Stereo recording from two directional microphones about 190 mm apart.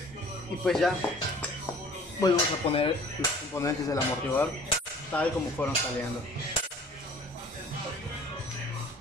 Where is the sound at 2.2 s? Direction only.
30° left (ahead or behind).